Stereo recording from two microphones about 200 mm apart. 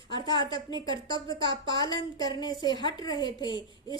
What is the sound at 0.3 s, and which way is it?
A woman's voice, 20° left (ahead or behind).